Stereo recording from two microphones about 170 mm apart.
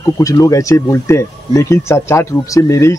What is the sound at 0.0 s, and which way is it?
Speech, 20° left (ahead or behind).